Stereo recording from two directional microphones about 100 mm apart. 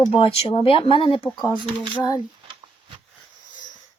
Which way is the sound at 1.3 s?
45° left (ahead or behind).